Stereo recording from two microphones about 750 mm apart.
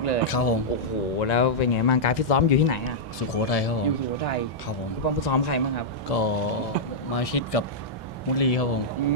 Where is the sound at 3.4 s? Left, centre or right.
Left.